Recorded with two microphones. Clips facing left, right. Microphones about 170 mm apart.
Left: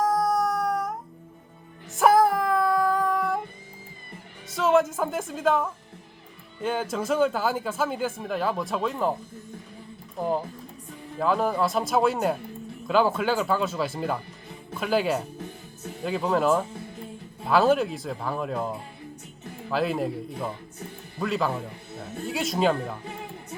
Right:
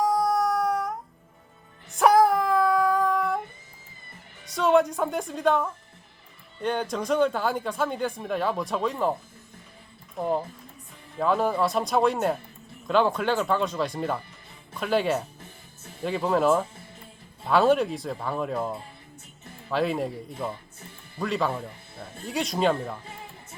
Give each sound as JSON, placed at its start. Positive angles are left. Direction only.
{"t": 0.0, "sound": "a sound", "side_deg": 0}
{"t": 1.9, "sound": "music", "side_deg": 0}
{"t": 4.4, "sound": "a woman's voice", "side_deg": 0}
{"t": 10.2, "sound": "speech", "side_deg": 0}
{"t": 19.7, "sound": "speech", "side_deg": 0}